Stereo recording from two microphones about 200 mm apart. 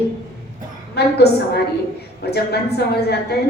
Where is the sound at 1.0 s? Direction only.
55° left (ahead or behind).